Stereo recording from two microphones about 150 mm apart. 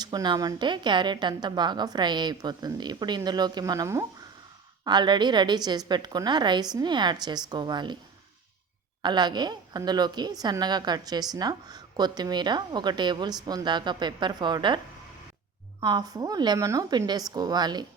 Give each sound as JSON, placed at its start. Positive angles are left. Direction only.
{"t": 0.0, "sound": "a woman's voice", "side_deg": -25}
{"t": 9.0, "sound": "a woman's voice", "side_deg": -30}
{"t": 15.8, "sound": "a woman's voice", "side_deg": -30}